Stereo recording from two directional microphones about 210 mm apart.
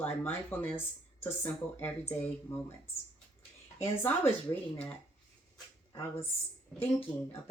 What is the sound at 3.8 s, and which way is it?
Speech, 10° left (ahead or behind).